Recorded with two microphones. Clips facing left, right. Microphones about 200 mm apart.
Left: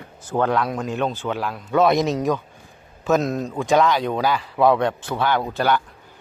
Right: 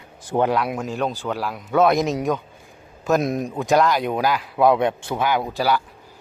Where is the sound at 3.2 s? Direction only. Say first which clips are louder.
Even; 15° right (ahead or behind).